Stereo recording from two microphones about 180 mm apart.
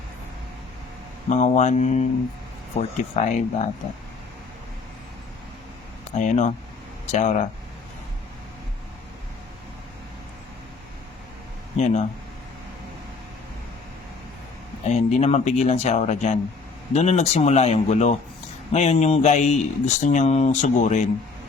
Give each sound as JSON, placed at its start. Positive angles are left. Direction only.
{"t": 1.3, "sound": "speech", "side_deg": 40}
{"t": 6.1, "sound": "speech", "side_deg": 40}
{"t": 14.8, "sound": "speech", "side_deg": 40}